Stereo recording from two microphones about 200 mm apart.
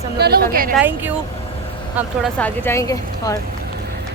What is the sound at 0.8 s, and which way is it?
Speech, 10° right (ahead or behind).